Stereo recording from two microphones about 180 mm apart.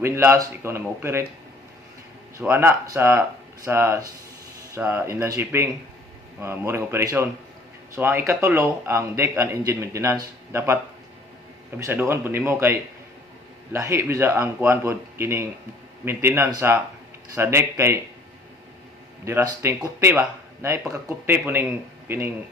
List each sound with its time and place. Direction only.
0.0 s speech: 15° right (ahead or behind)
2.4 s speech: 15° right (ahead or behind)
11.8 s speech: 10° right (ahead or behind)
19.2 s speech: 15° right (ahead or behind)